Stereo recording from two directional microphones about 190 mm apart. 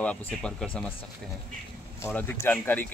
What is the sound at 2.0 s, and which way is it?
Speech, 10° left (ahead or behind).